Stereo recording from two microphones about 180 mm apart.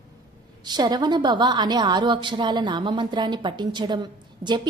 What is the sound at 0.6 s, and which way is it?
A woman's voice, 25° right (ahead or behind).